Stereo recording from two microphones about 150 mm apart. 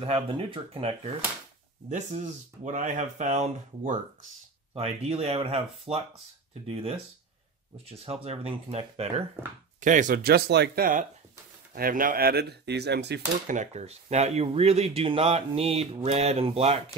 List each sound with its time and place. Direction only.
0.0 s speech: 40° right (ahead or behind)
1.9 s speech: 55° right (ahead or behind)
9.8 s speech: 60° right (ahead or behind); by 13.6 s 90° right
13.6 s speech: 45° right (ahead or behind)